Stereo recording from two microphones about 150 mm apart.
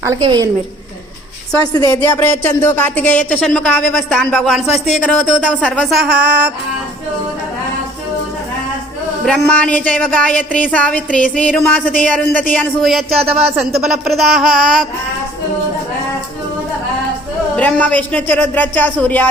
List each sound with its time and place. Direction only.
0.2 s a woman's voice: 25° right (ahead or behind)
2.0 s speech: 15° left (ahead or behind)
6.1 s music: 10° right (ahead or behind)
9.2 s speech: 5° left (ahead or behind)
13.1 s speech: 40° right (ahead or behind)
13.8 s speech: centre (ahead or behind)
17.6 s speech: 10° left (ahead or behind)